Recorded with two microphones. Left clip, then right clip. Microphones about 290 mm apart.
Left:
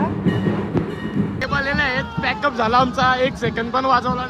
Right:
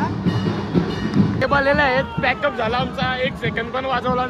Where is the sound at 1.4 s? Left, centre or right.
Centre.